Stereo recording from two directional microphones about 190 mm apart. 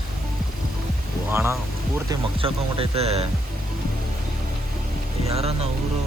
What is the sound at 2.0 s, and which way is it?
Speech, 30° right (ahead or behind).